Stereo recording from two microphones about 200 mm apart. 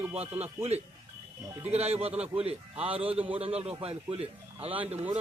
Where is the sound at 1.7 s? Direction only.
30° right (ahead or behind).